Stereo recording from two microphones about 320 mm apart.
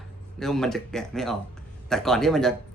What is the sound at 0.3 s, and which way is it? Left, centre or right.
A man's voice, centre.